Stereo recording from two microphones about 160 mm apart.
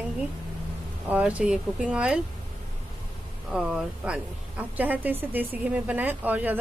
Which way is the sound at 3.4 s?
5° right (ahead or behind).